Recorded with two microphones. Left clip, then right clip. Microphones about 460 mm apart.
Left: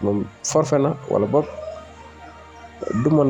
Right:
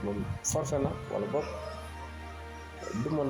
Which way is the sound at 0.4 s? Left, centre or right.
Right.